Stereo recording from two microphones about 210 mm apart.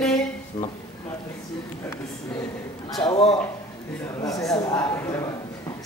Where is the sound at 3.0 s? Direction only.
25° left (ahead or behind).